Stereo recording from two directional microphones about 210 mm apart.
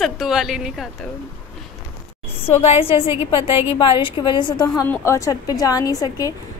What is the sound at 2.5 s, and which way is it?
A woman's voice, 30° left (ahead or behind).